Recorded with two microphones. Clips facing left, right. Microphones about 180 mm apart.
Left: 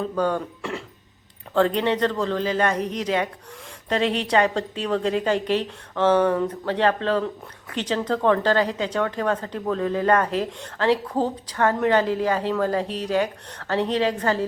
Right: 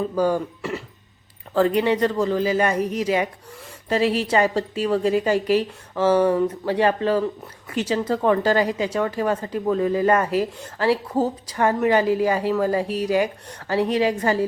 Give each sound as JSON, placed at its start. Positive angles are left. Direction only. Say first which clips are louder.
{"t": 0.0, "sound": "speech", "louder": "right 3 dB", "side_deg": -5}